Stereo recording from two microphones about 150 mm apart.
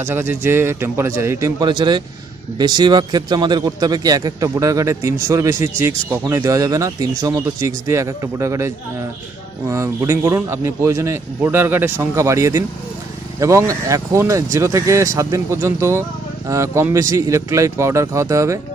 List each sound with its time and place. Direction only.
0.0 s a man's voice: 15° right (ahead or behind)
1.7 s a man's voice: 30° right (ahead or behind)